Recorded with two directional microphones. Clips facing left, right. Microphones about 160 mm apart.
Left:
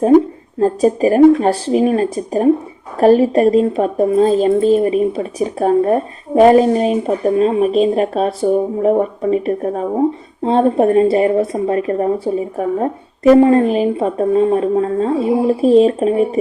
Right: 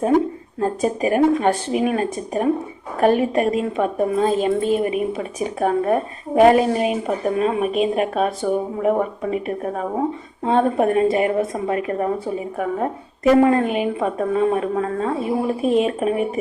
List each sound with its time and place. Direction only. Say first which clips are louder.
0.6 s a woman's voice: left 7 dB; 35° left (ahead or behind)